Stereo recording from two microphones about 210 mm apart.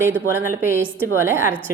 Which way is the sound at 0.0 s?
10° right (ahead or behind).